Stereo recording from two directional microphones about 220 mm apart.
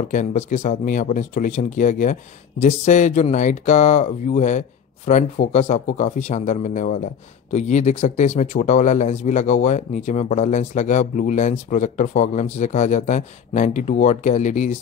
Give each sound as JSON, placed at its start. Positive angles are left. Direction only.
{"t": 0.1, "sound": "speech", "side_deg": 35}